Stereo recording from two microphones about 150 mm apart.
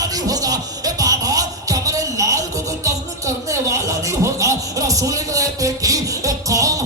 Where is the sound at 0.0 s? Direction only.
25° right (ahead or behind).